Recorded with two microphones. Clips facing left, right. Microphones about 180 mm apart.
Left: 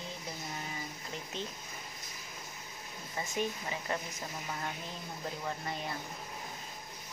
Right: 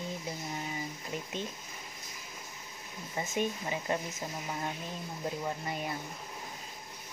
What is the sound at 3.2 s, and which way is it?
Speech, 20° right (ahead or behind).